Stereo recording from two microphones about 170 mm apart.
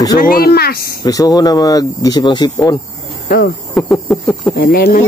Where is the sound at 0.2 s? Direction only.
60° left (ahead or behind).